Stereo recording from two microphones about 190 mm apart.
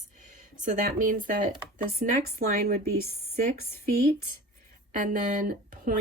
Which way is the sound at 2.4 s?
55° right (ahead or behind).